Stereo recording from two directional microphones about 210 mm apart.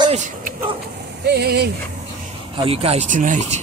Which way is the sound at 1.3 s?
50° right (ahead or behind).